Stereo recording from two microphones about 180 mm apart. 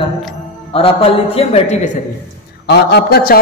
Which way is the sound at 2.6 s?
65° left (ahead or behind).